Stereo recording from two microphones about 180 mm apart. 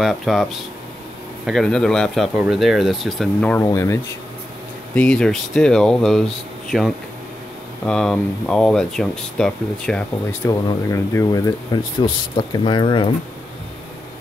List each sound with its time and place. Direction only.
0.0 s speech: centre (ahead or behind); by 4.0 s 15° left (ahead or behind)
4.9 s speech: 5° left (ahead or behind)
10.5 s speech: 20° left (ahead or behind)